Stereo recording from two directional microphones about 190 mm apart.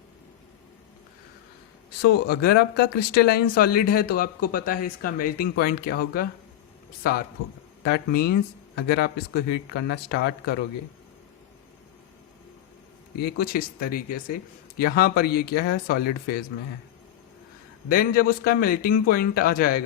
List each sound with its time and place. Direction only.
2.0 s speech: 55° left (ahead or behind)
13.1 s speech: 55° left (ahead or behind)
17.8 s speech: 50° left (ahead or behind)